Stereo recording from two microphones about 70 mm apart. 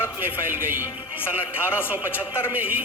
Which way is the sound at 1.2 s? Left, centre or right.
Left.